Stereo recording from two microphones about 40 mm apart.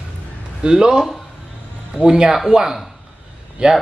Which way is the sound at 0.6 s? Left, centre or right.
Right.